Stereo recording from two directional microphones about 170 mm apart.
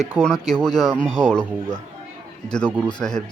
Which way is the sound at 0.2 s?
5° left (ahead or behind).